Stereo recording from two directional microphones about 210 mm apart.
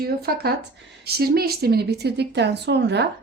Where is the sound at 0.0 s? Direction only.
45° right (ahead or behind).